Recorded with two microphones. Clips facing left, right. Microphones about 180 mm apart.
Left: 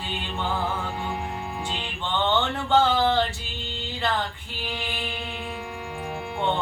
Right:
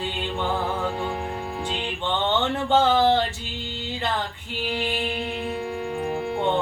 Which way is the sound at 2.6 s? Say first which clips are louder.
Right 2 dB; 20° right (ahead or behind).